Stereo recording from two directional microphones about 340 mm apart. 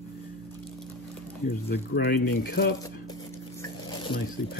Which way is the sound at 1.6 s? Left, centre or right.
Left.